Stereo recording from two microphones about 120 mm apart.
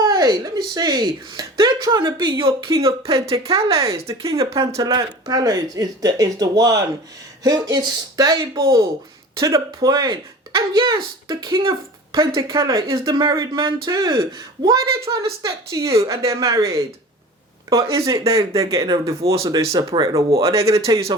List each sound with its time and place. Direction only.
0.0 s speech: 35° right (ahead or behind)
3.3 s speech: 50° right (ahead or behind)
3.7 s speech: 25° right (ahead or behind)
20.4 s speech: 25° right (ahead or behind)